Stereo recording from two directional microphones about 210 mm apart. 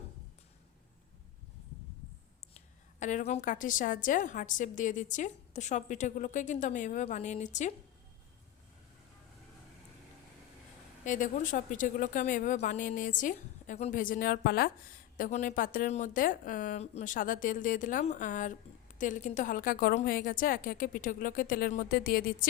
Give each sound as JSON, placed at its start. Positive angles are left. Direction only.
{"t": 3.0, "sound": "a woman's voice", "side_deg": 35}
{"t": 11.0, "sound": "a woman's voice", "side_deg": 35}
{"t": 15.2, "sound": "a woman's voice", "side_deg": 35}